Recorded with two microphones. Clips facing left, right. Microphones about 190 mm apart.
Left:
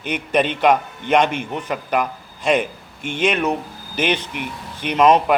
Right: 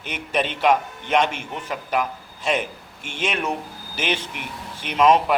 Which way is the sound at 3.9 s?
5° right (ahead or behind).